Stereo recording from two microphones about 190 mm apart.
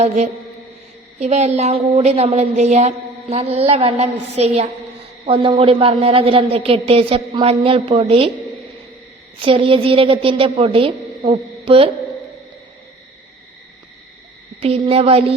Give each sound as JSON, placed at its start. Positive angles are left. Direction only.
{"t": 1.2, "sound": "a woman's voice", "side_deg": -35}
{"t": 9.4, "sound": "a woman's voice", "side_deg": -30}
{"t": 14.6, "sound": "a woman's voice", "side_deg": -30}